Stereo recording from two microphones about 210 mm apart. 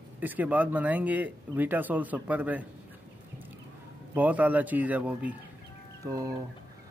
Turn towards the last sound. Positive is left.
turn(degrees=-15)  # may be behind; listen again after turning